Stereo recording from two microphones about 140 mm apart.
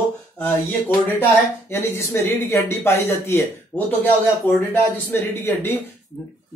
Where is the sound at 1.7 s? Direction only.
15° left (ahead or behind).